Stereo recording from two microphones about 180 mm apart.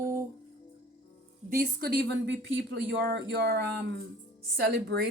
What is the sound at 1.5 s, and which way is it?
Speech, 60° right (ahead or behind).